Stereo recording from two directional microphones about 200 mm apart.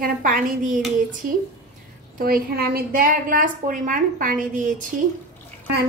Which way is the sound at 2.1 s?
45° right (ahead or behind).